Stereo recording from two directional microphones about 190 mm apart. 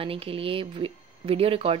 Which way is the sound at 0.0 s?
30° right (ahead or behind).